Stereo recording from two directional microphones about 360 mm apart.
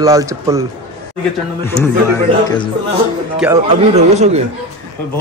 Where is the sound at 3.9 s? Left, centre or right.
Centre.